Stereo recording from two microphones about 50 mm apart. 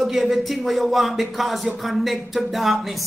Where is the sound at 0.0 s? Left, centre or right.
Centre.